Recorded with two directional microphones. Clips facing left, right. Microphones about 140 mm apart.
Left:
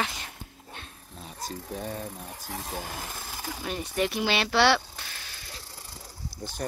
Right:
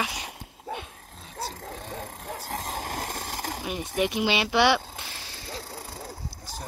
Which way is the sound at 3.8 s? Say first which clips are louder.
Right 2 dB; 20° right (ahead or behind).